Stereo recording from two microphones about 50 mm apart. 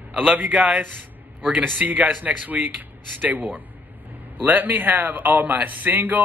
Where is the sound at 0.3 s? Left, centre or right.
Right.